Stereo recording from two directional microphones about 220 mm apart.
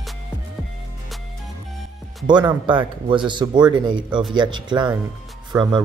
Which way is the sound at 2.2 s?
20° right (ahead or behind).